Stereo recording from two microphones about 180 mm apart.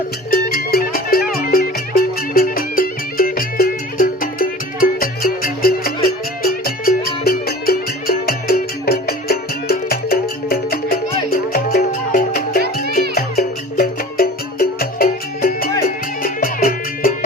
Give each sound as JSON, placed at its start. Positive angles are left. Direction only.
{"t": 0.3, "sound": "music", "side_deg": 55}